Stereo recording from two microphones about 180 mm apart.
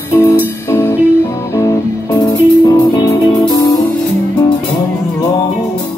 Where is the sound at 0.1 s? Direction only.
15° left (ahead or behind).